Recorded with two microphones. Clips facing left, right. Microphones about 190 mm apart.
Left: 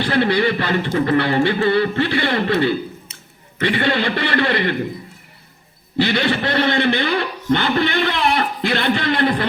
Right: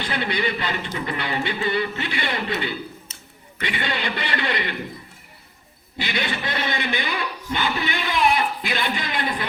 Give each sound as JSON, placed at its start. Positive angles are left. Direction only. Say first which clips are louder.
{"t": 0.0, "sound": "a man's voice", "louder": "left 8 dB", "side_deg": 60}
{"t": 3.6, "sound": "a man's voice", "louder": "left 9 dB", "side_deg": 55}
{"t": 6.0, "sound": "a man's voice", "louder": "left 9 dB", "side_deg": 60}
{"t": 7.8, "sound": "a man's voice", "louder": "left 9 dB", "side_deg": -10}
{"t": 8.0, "sound": "a man's voice", "louder": "left 2 dB", "side_deg": 60}